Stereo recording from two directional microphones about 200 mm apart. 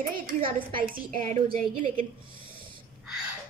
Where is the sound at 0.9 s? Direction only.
40° right (ahead or behind).